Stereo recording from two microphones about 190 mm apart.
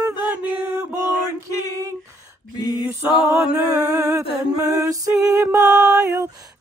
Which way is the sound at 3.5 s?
20° right (ahead or behind).